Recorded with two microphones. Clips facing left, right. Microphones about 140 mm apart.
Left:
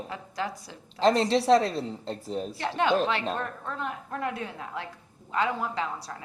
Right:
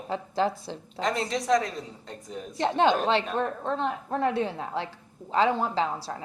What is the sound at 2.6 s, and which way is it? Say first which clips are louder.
A woman's voice: right 3 dB; 30° right (ahead or behind).